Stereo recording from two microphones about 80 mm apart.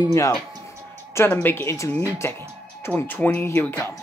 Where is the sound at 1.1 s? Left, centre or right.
Left.